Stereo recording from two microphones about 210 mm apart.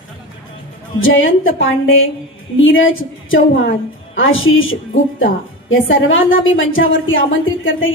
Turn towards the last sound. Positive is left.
turn(degrees=65)  # may be behind; listen again after turning